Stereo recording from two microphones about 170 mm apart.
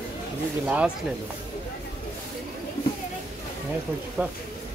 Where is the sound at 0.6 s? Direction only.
10° right (ahead or behind).